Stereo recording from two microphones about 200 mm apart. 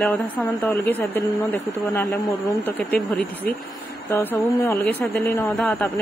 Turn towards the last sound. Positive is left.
turn(degrees=10)  # may be behind; listen again after turning